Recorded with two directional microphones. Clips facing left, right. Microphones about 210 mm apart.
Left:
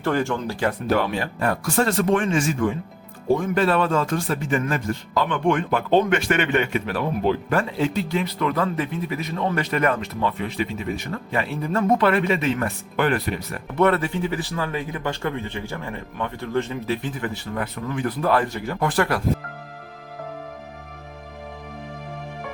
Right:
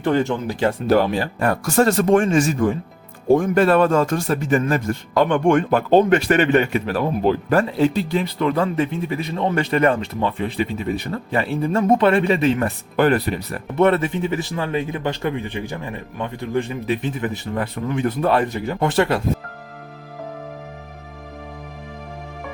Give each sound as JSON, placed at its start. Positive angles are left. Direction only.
{"t": 0.0, "sound": "a man's voice", "side_deg": -20}
{"t": 0.9, "sound": "speech", "side_deg": -35}
{"t": 1.4, "sound": "a man's voice", "side_deg": -45}
{"t": 13.7, "sound": "a man's voice", "side_deg": -25}